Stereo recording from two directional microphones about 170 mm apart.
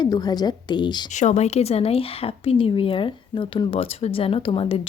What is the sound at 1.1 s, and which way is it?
Speech, 45° left (ahead or behind).